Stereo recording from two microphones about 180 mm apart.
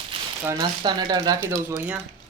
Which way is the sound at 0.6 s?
25° right (ahead or behind).